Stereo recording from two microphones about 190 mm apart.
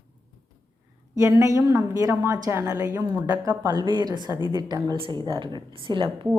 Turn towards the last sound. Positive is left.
turn(degrees=-25)  # may be behind; listen again after turning